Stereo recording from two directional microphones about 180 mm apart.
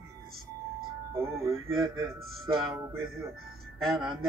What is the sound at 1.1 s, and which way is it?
Speech, 15° right (ahead or behind).